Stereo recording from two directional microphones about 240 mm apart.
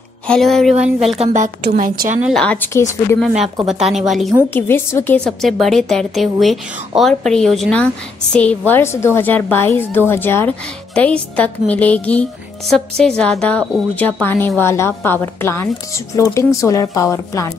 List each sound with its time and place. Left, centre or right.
0.3 s a woman's voice: centre
1.2 s a woman's voice: right
2.2 s a woman's voice: centre
3.6 s a woman's voice: centre